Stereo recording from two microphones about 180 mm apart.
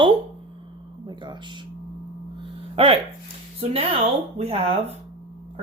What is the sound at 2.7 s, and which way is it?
Speech, 30° right (ahead or behind).